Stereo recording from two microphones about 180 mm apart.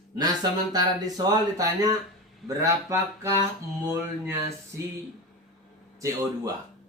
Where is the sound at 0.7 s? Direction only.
20° right (ahead or behind).